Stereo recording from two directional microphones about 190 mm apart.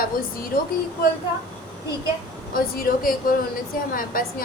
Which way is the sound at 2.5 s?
50° left (ahead or behind).